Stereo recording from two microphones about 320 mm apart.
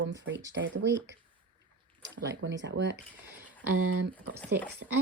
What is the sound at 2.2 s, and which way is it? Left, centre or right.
Speech, right.